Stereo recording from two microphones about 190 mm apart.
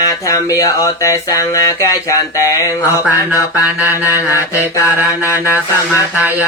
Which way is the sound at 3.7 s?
10° right (ahead or behind).